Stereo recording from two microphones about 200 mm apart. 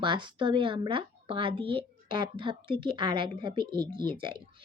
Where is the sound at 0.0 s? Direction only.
25° right (ahead or behind).